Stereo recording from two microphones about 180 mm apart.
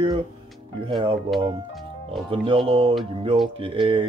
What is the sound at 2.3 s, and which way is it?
Speech, 30° right (ahead or behind).